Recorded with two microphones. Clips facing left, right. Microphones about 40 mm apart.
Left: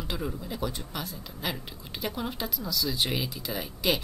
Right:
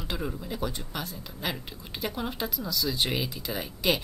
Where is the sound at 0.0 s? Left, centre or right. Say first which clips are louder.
Even; centre.